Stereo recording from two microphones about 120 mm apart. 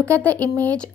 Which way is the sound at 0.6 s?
10° left (ahead or behind).